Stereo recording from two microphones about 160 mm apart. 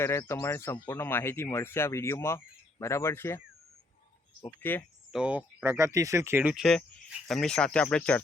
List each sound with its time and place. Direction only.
0.0 s speech: 15° left (ahead or behind)
4.4 s speech: 15° left (ahead or behind)
5.1 s speech: 5° right (ahead or behind)
5.6 s speech: 20° right (ahead or behind); by 8.2 s 5° left (ahead or behind)